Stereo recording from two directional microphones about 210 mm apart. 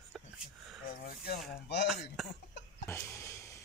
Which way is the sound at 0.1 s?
Centre (ahead or behind).